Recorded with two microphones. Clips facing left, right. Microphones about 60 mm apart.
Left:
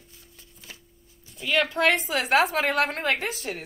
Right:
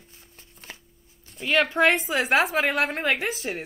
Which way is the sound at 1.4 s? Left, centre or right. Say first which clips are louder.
Right 2 dB; right.